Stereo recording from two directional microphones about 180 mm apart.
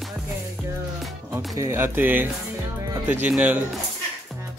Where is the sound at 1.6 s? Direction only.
15° right (ahead or behind).